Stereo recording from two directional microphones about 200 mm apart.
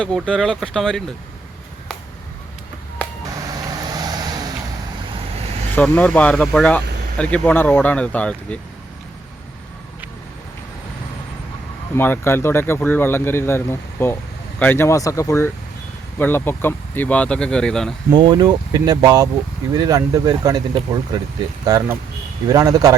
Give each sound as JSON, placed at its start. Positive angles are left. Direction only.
{"t": 0.0, "sound": "speech", "side_deg": 5}
{"t": 3.9, "sound": "vehicle", "side_deg": -20}
{"t": 5.7, "sound": "speech", "side_deg": 10}
{"t": 11.9, "sound": "speech", "side_deg": 10}
{"t": 18.1, "sound": "speech", "side_deg": -25}